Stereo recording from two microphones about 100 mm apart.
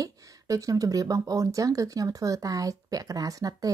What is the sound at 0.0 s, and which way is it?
Speech, 35° right (ahead or behind).